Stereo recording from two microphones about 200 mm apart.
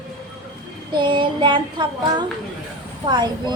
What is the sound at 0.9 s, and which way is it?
Speech, 25° right (ahead or behind).